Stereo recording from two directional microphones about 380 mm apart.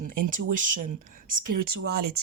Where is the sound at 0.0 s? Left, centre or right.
Right.